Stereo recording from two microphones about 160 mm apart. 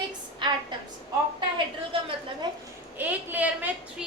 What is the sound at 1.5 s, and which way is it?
Speech, 30° right (ahead or behind).